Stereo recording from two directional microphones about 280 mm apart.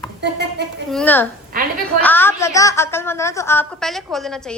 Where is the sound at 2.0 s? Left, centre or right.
Centre.